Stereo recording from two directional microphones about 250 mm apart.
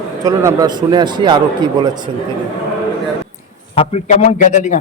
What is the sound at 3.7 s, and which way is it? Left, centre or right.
A man's voice, left.